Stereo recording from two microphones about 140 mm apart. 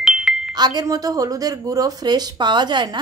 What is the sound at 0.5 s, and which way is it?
A woman's voice, 30° right (ahead or behind).